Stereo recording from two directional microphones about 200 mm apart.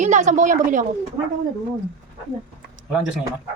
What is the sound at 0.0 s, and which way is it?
Speech, 35° right (ahead or behind).